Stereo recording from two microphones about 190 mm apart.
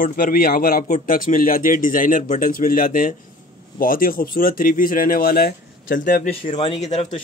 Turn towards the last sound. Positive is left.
turn(degrees=40)  # may be behind; listen again after turning